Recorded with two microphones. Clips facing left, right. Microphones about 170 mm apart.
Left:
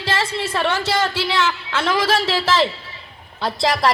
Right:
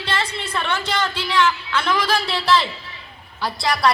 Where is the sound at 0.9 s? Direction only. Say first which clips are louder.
Left 1 dB; 25° left (ahead or behind).